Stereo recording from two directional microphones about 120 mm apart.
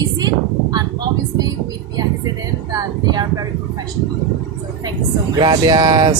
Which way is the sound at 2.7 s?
30° right (ahead or behind).